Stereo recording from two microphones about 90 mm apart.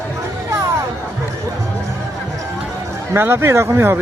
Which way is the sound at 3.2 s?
25° right (ahead or behind).